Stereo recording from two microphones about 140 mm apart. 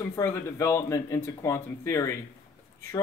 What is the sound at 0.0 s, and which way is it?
Speech, 20° left (ahead or behind).